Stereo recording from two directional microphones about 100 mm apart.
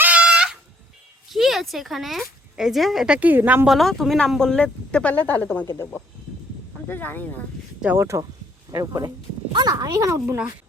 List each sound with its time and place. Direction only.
0.0 s a sound: 10° right (ahead or behind)
1.3 s speech: centre (ahead or behind)
3.2 s a woman's voice: 15° right (ahead or behind)
3.7 s speech: centre (ahead or behind); by 5.6 s 20° left (ahead or behind)
6.8 s speech: 20° left (ahead or behind)
7.9 s speech: 30° right (ahead or behind)
10.2 s a woman's voice: 15° right (ahead or behind)